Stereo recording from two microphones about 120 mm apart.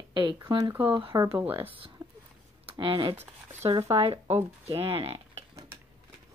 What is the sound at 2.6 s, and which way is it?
Speech, 45° right (ahead or behind).